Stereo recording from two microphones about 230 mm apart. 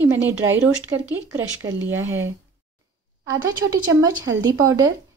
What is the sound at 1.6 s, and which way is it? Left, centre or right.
Speech, right.